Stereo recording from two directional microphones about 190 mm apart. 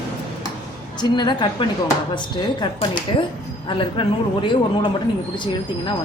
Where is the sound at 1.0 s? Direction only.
25° left (ahead or behind).